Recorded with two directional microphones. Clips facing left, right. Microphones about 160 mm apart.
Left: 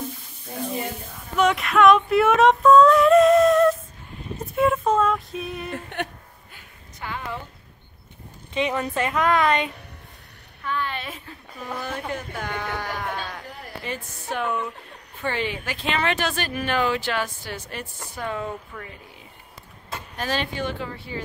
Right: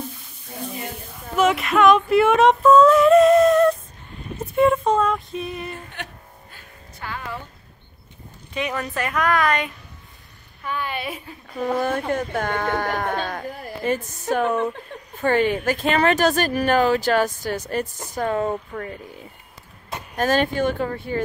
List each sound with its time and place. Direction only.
1.3 s a sound: centre (ahead or behind)
4.4 s female singing: centre (ahead or behind)
6.0 s speech: 60° left (ahead or behind)
6.5 s music: 20° left (ahead or behind)
8.5 s a woman's voice: 25° left (ahead or behind)
10.6 s a woman's voice: 10° right (ahead or behind)
11.5 s speech: 50° right (ahead or behind)
20.2 s speech: 45° right (ahead or behind)